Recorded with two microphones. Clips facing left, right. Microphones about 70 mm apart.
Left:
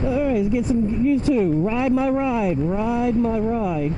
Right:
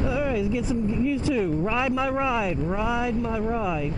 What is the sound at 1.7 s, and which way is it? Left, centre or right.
Speech, right.